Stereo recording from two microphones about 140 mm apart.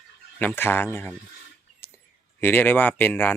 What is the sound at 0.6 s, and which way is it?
Speech, 15° left (ahead or behind).